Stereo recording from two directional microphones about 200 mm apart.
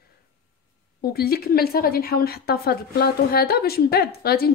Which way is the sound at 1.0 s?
50° left (ahead or behind).